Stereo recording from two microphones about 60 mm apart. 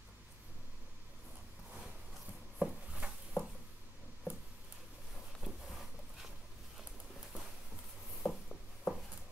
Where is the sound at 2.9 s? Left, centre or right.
Centre.